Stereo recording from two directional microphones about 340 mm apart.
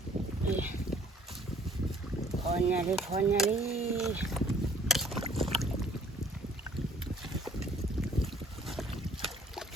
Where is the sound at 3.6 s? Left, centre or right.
Centre.